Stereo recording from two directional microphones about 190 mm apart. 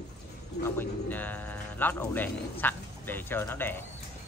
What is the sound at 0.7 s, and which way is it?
Speech, 10° left (ahead or behind).